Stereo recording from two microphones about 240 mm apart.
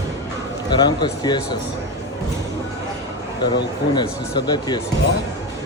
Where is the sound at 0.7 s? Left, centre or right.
Centre.